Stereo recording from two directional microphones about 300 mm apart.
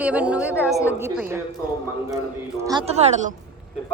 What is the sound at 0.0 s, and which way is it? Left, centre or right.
A woman's voice, centre.